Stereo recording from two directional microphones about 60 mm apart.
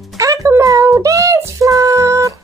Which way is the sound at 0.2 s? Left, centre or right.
Right.